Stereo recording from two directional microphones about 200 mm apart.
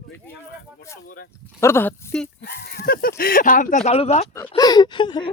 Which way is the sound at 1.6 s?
10° left (ahead or behind).